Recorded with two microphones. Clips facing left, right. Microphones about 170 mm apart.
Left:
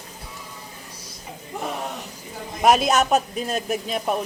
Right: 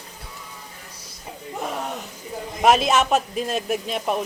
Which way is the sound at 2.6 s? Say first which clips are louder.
Even; centre (ahead or behind).